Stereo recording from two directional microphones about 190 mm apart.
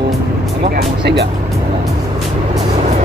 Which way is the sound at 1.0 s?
65° right (ahead or behind).